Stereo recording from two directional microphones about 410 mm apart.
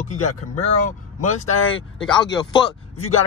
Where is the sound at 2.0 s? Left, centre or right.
Centre.